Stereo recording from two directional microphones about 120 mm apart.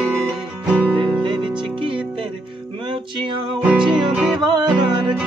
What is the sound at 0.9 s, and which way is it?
Music, 45° right (ahead or behind).